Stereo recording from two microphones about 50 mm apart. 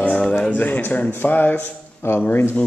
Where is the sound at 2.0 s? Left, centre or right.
Left.